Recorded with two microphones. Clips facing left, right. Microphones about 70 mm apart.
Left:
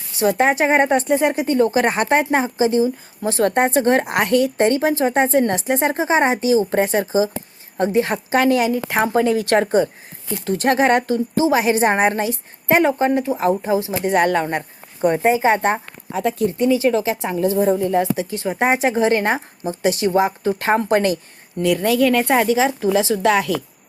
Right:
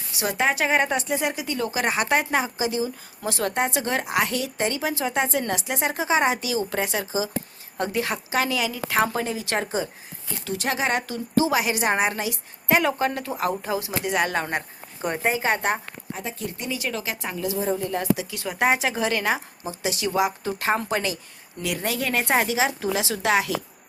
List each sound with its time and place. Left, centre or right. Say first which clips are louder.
0.2 s speech: left 7 dB; left
14.1 s speech: left 7 dB; left
15.1 s speech: left 7 dB; centre
17.4 s speech: left 9 dB; left
17.7 s speech: left 8 dB; left
18.2 s speech: left 5 dB; left